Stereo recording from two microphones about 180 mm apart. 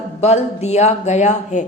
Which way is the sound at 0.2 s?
35° left (ahead or behind).